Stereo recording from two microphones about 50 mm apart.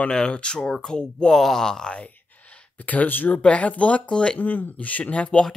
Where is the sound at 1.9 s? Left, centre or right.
Left.